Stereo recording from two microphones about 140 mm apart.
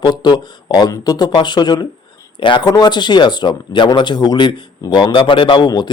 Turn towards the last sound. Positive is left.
turn(degrees=30)  # may be behind; listen again after turning